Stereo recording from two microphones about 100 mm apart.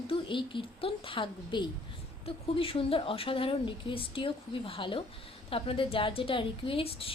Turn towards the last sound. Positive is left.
turn(degrees=65)  # may be behind; listen again after turning